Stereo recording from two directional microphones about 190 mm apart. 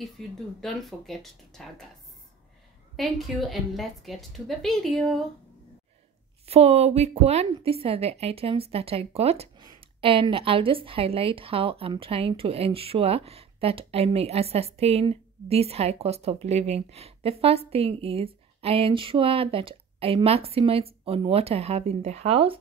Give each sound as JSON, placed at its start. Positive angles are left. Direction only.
{"t": 0.6, "sound": "a woman's voice", "side_deg": 0}
{"t": 3.0, "sound": "a woman's voice", "side_deg": 0}
{"t": 6.4, "sound": "a woman's voice", "side_deg": -30}